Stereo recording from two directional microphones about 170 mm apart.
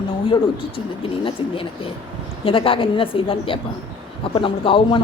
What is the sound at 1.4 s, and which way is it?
A woman's voice, 30° left (ahead or behind).